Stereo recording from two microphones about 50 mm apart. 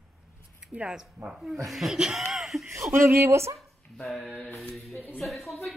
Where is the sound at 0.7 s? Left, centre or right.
Right.